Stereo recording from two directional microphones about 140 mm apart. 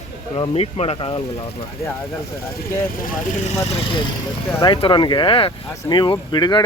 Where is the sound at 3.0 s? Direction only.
65° left (ahead or behind).